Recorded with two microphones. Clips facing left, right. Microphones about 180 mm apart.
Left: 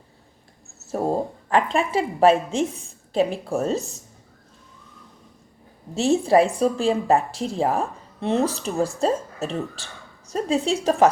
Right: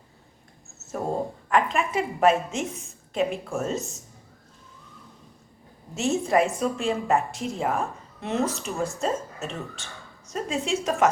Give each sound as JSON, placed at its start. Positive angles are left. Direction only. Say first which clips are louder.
{"t": 1.5, "sound": "a woman's voice", "louder": "left 2 dB", "side_deg": 30}
{"t": 5.9, "sound": "a woman's voice", "louder": "left 5 dB", "side_deg": 30}